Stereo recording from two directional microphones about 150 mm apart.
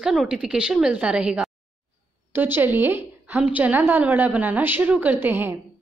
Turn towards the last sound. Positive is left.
turn(degrees=-15)  # may be behind; listen again after turning